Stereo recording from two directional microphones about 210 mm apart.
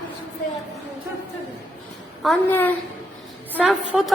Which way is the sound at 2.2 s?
5° left (ahead or behind).